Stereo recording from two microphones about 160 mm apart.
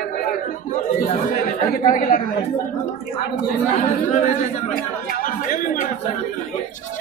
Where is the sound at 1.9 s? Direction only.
55° left (ahead or behind).